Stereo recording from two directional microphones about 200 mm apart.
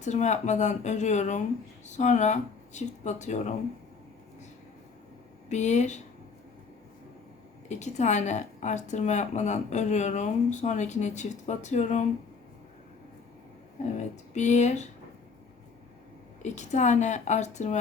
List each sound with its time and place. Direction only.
0.0 s a woman's voice: 35° left (ahead or behind)
5.5 s a woman's voice: 35° left (ahead or behind)
7.7 s a woman's voice: 35° left (ahead or behind)
14.3 s a woman's voice: 35° left (ahead or behind)
16.4 s a woman's voice: 35° left (ahead or behind)